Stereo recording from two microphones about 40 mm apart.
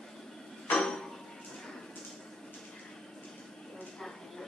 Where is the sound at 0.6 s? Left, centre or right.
Centre.